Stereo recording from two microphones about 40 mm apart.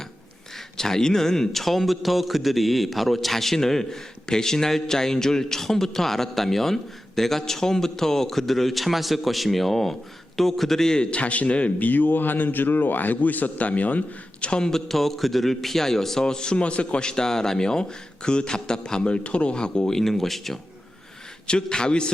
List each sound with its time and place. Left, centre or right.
0.5 s a man's voice: centre
11.2 s a man's voice: left
11.9 s a man's voice: left
14.4 s a man's voice: left
14.7 s a man's voice: centre; by 19.9 s left
19.9 s a man's voice: centre
21.4 s a man's voice: left